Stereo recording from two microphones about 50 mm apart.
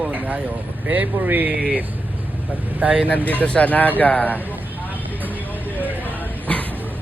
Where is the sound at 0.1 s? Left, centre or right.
Right.